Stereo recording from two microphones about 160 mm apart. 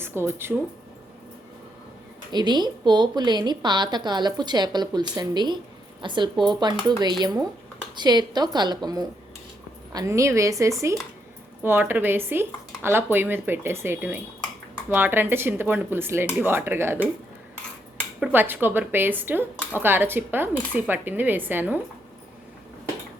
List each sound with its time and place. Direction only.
0.0 s speech: 15° right (ahead or behind)
2.3 s a woman's voice: 25° right (ahead or behind)
18.2 s speech: 10° right (ahead or behind)